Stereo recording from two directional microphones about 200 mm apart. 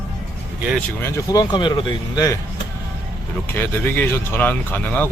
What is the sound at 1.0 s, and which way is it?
Speech, 15° left (ahead or behind).